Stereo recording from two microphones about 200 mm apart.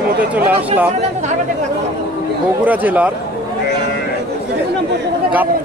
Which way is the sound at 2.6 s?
10° right (ahead or behind).